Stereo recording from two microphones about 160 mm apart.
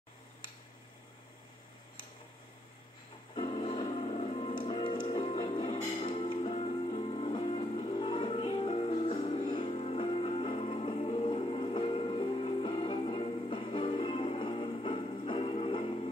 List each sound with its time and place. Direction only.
3.3 s music: 35° left (ahead or behind)